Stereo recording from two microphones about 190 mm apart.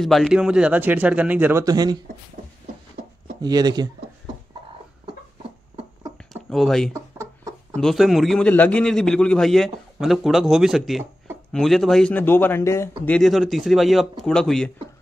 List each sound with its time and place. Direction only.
0.0 s speech: centre (ahead or behind); by 2.0 s 20° right (ahead or behind)
3.3 s speech: 20° right (ahead or behind)
6.5 s a man's voice: centre (ahead or behind)
6.9 s a sound: 15° right (ahead or behind)
7.7 s a man's voice: centre (ahead or behind)